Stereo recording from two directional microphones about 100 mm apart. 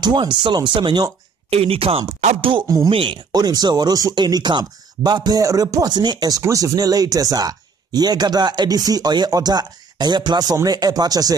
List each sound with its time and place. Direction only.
0.0 s speech: 50° right (ahead or behind)
1.5 s speech: 80° right
2.0 s speech: 55° right (ahead or behind)
3.3 s speech: 40° right (ahead or behind)